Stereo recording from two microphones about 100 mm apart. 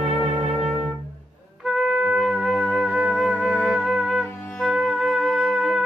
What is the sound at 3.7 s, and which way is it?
Music, centre (ahead or behind).